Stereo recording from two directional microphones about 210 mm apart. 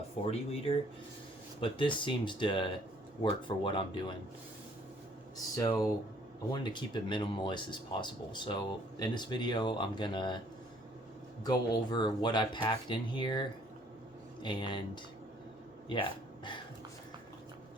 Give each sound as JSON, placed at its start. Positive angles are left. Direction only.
{"t": 0.3, "sound": "speech", "side_deg": 25}
{"t": 5.5, "sound": "speech", "side_deg": 15}
{"t": 11.4, "sound": "speech", "side_deg": 20}
{"t": 15.9, "sound": "speech", "side_deg": 20}